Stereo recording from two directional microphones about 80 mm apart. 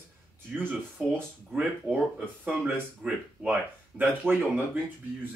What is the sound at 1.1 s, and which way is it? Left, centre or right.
Speech, right.